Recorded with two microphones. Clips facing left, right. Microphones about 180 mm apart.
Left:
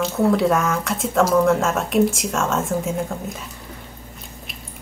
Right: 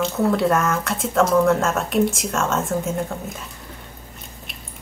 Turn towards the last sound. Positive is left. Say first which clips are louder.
# left 1 dB
turn(degrees=0)  # may be behind; listen again after turning